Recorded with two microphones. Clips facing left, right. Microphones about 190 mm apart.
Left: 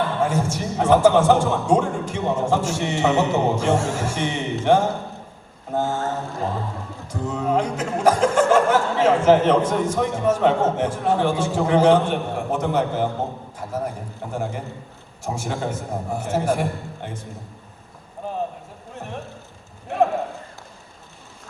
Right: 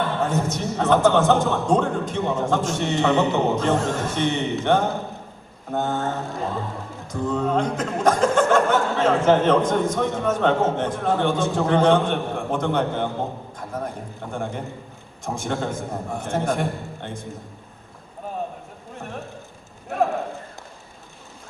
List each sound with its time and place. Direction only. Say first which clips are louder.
0.2 s speech: left 1 dB; 10° left (ahead or behind)
7.1 s speech: even; 10° left (ahead or behind)